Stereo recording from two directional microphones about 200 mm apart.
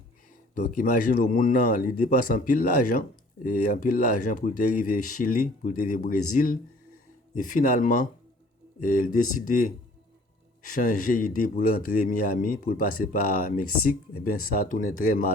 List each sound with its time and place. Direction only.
0.6 s speech: 40° left (ahead or behind)